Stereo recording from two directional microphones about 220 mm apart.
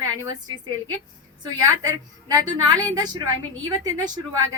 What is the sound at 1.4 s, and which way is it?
A woman's voice, 15° right (ahead or behind).